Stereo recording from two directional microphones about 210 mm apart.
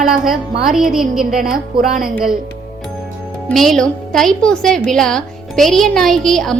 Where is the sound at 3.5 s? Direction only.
Centre (ahead or behind).